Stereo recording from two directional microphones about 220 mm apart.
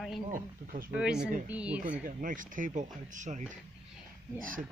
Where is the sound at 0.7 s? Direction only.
40° right (ahead or behind).